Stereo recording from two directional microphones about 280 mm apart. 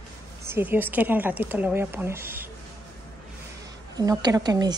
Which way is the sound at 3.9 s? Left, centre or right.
Centre.